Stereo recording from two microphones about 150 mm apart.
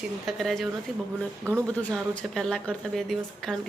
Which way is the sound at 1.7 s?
5° left (ahead or behind).